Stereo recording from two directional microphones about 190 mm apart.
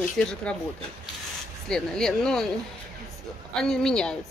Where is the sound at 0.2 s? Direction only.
5° left (ahead or behind).